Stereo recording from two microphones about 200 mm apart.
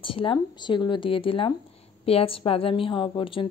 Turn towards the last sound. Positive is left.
turn(degrees=25)  # may be behind; listen again after turning